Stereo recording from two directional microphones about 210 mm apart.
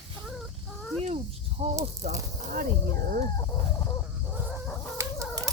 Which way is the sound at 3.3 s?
15° left (ahead or behind).